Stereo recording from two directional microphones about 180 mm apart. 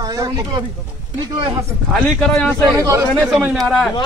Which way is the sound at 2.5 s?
15° right (ahead or behind).